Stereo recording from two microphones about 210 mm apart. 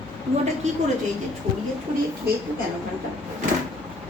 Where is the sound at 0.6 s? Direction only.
35° right (ahead or behind).